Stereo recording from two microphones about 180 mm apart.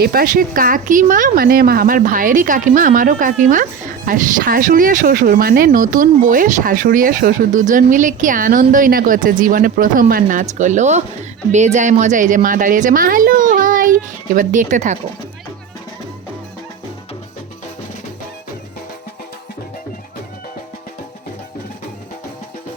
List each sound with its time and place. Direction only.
0.0 s speech: 55° right (ahead or behind)